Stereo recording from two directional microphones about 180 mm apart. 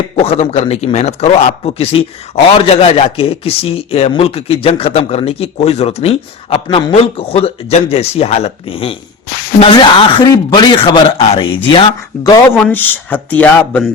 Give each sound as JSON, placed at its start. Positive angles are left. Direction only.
{"t": 0.2, "sound": "a man's voice", "side_deg": 35}
{"t": 12.1, "sound": "speech", "side_deg": 0}